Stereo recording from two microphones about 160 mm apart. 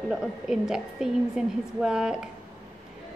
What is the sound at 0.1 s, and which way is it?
A woman's voice, 5° right (ahead or behind).